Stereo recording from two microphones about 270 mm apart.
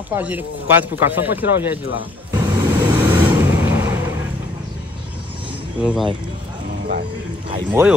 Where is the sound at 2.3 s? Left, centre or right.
Centre.